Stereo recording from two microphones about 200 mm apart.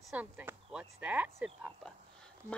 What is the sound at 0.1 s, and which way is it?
Speech, 5° right (ahead or behind).